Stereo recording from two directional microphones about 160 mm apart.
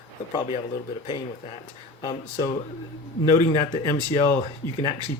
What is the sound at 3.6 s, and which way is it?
Speech, 30° left (ahead or behind).